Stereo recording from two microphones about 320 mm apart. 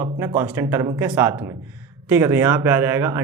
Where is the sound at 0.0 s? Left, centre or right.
Centre.